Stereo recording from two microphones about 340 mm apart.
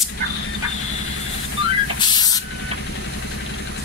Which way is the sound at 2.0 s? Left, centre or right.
Centre.